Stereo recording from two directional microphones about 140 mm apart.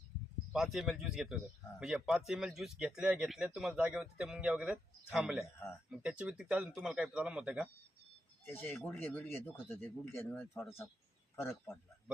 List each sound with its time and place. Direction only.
0.5 s speech: 5° right (ahead or behind)
8.4 s a man's voice: 15° left (ahead or behind)